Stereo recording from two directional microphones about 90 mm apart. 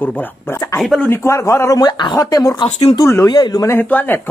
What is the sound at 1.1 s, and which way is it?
Speech, 30° left (ahead or behind).